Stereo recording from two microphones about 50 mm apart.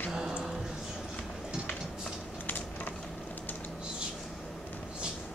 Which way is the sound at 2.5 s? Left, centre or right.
Left.